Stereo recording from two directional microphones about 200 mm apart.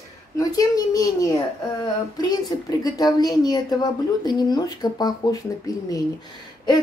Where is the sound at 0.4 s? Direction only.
20° left (ahead or behind).